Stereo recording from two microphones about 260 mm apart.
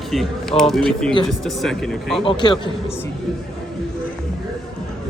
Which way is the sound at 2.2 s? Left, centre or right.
Centre.